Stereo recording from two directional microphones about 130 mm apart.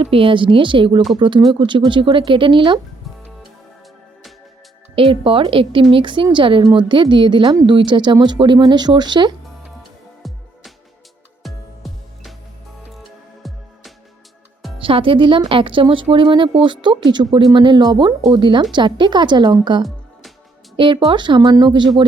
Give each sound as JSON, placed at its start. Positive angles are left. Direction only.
{"t": 0.0, "sound": "speech", "side_deg": -45}
{"t": 4.9, "sound": "a woman's voice", "side_deg": -45}
{"t": 10.2, "sound": "music", "side_deg": 0}
{"t": 11.4, "sound": "music", "side_deg": 0}
{"t": 14.8, "sound": "speech", "side_deg": -40}
{"t": 20.7, "sound": "speech", "side_deg": -40}